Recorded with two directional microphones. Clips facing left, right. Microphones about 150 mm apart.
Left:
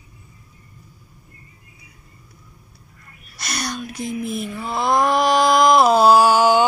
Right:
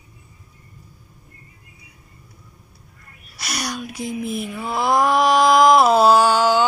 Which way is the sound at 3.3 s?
5° right (ahead or behind).